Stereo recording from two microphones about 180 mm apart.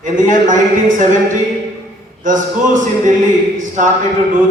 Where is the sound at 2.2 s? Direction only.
45° right (ahead or behind).